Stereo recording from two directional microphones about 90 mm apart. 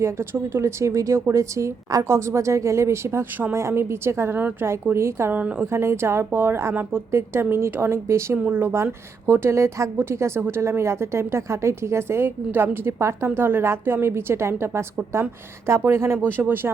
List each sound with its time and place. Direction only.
0.0 s a woman's voice: 30° right (ahead or behind)
5.4 s a woman's voice: 15° right (ahead or behind)
5.7 s a woman's voice: 30° right (ahead or behind)